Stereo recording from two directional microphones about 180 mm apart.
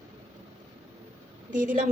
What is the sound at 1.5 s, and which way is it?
Speech, 45° right (ahead or behind).